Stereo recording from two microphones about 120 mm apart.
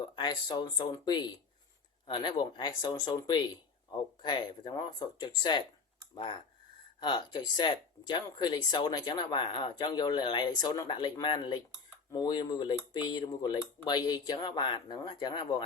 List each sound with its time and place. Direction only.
0.2 s speech: 35° left (ahead or behind)
7.0 s speech: 40° left (ahead or behind)